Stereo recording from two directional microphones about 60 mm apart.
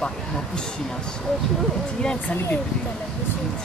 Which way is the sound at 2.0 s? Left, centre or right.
Centre.